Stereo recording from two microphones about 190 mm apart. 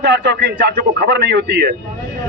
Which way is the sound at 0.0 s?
65° right (ahead or behind).